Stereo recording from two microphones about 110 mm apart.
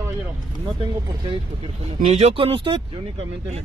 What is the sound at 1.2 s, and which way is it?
Speech, 55° right (ahead or behind).